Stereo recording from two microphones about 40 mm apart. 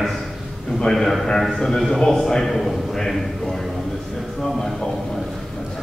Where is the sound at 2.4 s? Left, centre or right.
Centre.